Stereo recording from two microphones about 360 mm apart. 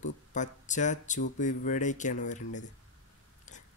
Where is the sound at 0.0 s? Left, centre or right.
Centre.